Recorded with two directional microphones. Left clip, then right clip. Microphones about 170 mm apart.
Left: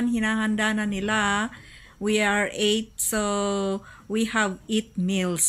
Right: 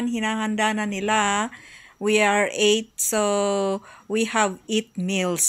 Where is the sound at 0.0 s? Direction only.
20° right (ahead or behind).